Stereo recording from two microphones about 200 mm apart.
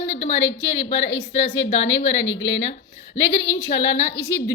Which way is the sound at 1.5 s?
70° left (ahead or behind).